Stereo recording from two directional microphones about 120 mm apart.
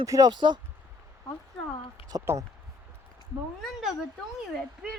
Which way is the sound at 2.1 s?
35° right (ahead or behind).